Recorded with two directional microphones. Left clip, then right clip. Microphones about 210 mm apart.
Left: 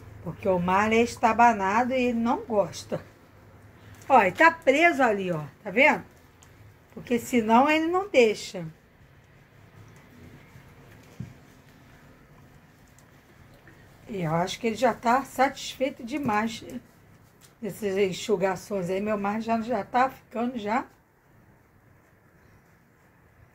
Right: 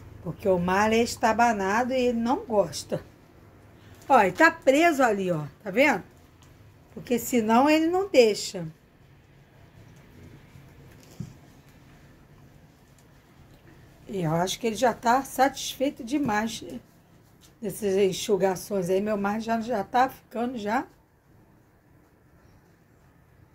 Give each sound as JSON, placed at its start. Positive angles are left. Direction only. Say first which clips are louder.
{"t": 0.2, "sound": "a woman's voice", "louder": "right 1 dB", "side_deg": -15}
{"t": 4.1, "sound": "a woman's voice", "louder": "even", "side_deg": -15}
{"t": 7.0, "sound": "a woman's voice", "louder": "even", "side_deg": -20}
{"t": 14.1, "sound": "a woman's voice", "louder": "right 1 dB", "side_deg": -20}